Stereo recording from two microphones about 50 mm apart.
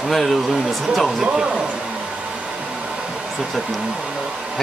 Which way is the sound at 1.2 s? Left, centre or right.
Centre.